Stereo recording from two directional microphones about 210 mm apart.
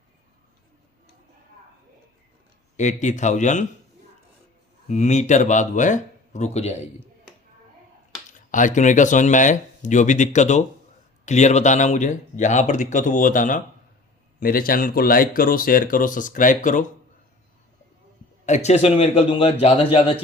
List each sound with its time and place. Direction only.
2.7 s speech: 35° left (ahead or behind)
4.9 s speech: 35° left (ahead or behind)
8.4 s speech: 40° left (ahead or behind)
18.4 s a man's voice: 35° left (ahead or behind)